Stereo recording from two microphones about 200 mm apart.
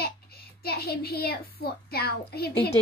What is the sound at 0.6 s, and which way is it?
A child's voice, 50° left (ahead or behind).